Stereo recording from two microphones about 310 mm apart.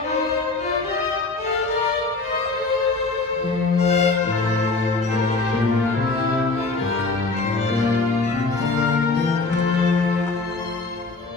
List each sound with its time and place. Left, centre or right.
3.8 s music: left